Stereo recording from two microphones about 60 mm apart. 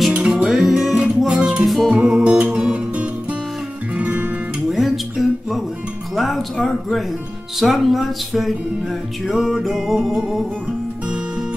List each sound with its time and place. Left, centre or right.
0.3 s music: centre; by 4.3 s right
4.6 s a sound: centre
6.1 s music: centre